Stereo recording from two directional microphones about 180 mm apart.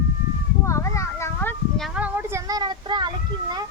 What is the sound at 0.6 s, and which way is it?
Children playing, 15° left (ahead or behind).